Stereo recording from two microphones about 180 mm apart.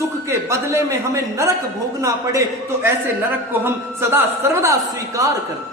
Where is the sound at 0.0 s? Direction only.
15° right (ahead or behind).